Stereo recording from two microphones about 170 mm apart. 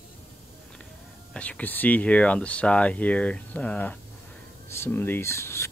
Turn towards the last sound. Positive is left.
turn(degrees=15)  # may be behind; listen again after turning